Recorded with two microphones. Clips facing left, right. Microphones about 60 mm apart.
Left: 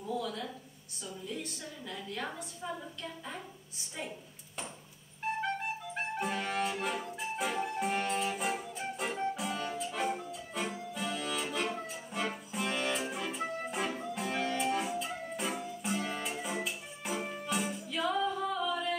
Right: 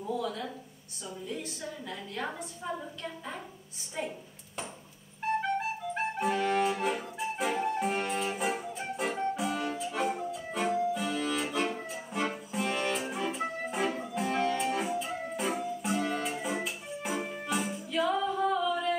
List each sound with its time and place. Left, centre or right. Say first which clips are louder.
0.0 s a sound: right 3 dB; centre
1.0 s a woman's voice: right 2 dB; centre
5.9 s clarinet: right 5 dB; centre
6.8 s music: right 4 dB; centre
10.7 s accordion: right 8 dB; centre
11.4 s music: right 3 dB; centre